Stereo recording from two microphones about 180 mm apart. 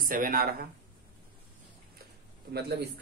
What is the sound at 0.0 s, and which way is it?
Speech, 50° right (ahead or behind).